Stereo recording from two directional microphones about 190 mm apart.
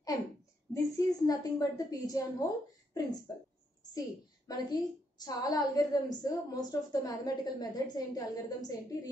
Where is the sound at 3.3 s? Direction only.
20° left (ahead or behind).